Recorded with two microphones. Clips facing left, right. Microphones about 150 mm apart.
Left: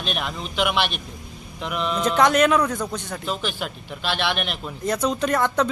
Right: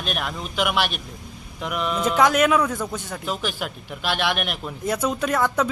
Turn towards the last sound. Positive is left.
turn(degrees=-5)  # may be behind; listen again after turning